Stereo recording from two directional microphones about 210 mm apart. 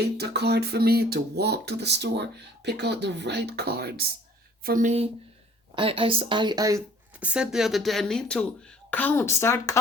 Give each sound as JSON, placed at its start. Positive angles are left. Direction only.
{"t": 0.0, "sound": "a woman's voice", "side_deg": -50}
{"t": 5.7, "sound": "speech", "side_deg": -25}